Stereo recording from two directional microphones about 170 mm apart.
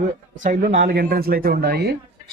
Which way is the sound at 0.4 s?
45° right (ahead or behind).